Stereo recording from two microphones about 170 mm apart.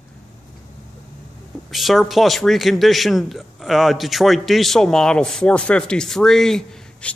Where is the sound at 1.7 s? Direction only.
Centre (ahead or behind).